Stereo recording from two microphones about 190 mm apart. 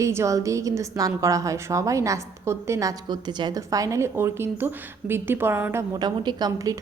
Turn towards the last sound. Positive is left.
turn(degrees=-20)  # may be behind; listen again after turning